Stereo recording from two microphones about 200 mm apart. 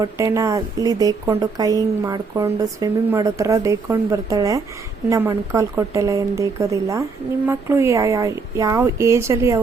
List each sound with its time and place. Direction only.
0.0 s speech: 15° right (ahead or behind)